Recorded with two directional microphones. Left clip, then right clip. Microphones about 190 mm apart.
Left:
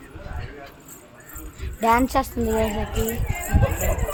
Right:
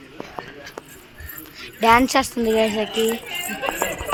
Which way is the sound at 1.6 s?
30° right (ahead or behind).